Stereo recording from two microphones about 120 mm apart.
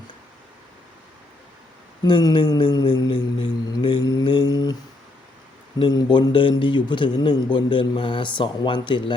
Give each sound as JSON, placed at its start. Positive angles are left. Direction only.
{"t": 2.3, "sound": "speech", "side_deg": 45}
{"t": 3.7, "sound": "mantra", "side_deg": 40}
{"t": 5.8, "sound": "speech", "side_deg": 35}